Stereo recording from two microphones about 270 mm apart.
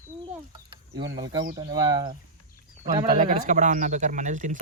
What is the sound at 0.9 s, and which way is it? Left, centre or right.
Speech, right.